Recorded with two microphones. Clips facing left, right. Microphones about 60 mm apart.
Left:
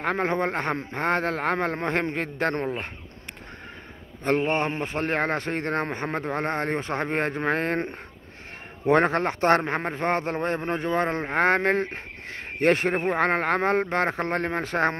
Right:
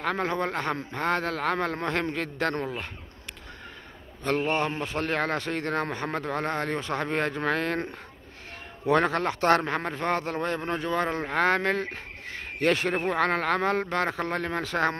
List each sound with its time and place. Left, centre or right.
0.0 s a man's voice: left
4.2 s a man's voice: left